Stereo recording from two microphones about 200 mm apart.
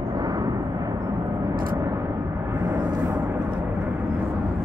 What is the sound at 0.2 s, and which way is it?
Vehicle, 20° right (ahead or behind).